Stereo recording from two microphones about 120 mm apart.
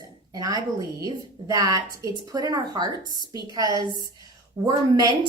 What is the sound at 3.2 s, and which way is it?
Speech, 40° left (ahead or behind).